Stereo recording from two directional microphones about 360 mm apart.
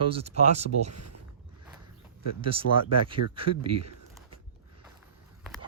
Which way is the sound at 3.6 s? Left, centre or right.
Right.